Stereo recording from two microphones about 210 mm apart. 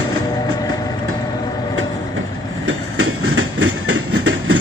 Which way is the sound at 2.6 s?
85° right.